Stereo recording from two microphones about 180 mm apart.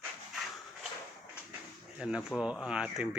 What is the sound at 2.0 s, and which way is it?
Speech, 5° right (ahead or behind).